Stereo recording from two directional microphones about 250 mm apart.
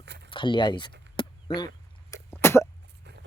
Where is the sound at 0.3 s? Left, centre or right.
Centre.